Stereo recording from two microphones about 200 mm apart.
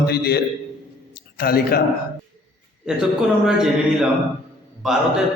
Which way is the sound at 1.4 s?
50° left (ahead or behind).